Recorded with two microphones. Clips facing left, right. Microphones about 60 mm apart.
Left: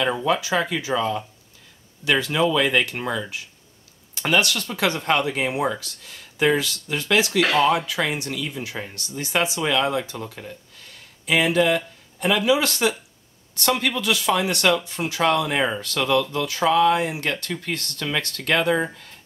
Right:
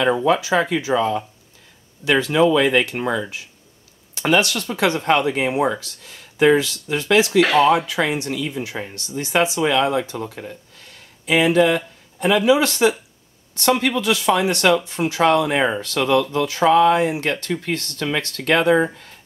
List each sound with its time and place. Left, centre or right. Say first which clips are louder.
0.0 s speech: right 4 dB; centre
4.2 s speech: right 3 dB; centre
7.2 s speech: right 4 dB; centre
7.7 s speech: right 4 dB; centre